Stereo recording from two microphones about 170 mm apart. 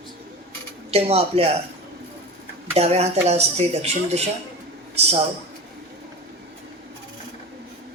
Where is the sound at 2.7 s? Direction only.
40° right (ahead or behind).